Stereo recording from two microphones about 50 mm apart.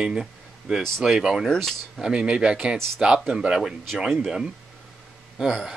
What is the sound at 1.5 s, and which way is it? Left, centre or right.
Speech, centre.